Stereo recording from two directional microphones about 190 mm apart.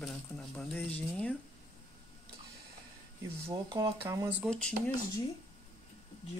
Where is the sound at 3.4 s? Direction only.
20° right (ahead or behind).